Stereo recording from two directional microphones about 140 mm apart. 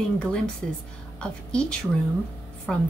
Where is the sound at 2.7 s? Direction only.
5° left (ahead or behind).